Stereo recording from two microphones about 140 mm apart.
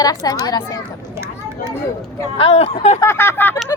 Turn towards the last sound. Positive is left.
turn(degrees=15)  # may be behind; listen again after turning